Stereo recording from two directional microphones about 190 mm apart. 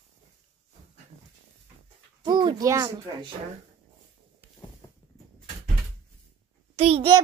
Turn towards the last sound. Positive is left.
turn(degrees=-30)  # may be behind; listen again after turning